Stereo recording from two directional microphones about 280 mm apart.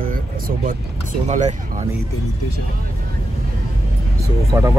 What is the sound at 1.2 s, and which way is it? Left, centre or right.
Speech, right.